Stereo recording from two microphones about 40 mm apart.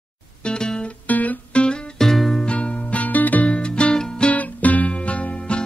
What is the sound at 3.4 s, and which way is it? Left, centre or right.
Music, left.